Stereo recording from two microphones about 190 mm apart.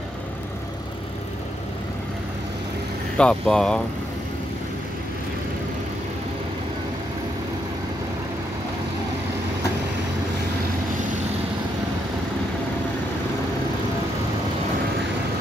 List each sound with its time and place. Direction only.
3.2 s speech: 5° left (ahead or behind)